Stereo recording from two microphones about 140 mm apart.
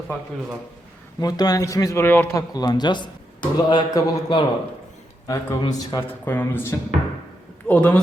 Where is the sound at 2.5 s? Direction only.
30° left (ahead or behind).